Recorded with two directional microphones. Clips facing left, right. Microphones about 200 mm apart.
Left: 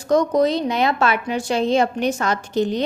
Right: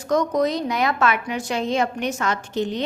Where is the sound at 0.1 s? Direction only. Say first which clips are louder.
Left 3 dB; 30° left (ahead or behind).